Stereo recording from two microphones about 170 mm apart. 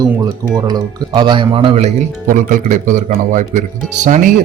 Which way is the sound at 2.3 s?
50° right (ahead or behind).